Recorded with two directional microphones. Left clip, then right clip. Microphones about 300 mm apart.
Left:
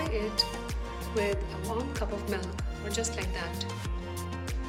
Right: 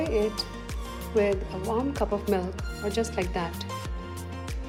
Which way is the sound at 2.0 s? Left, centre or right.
Centre.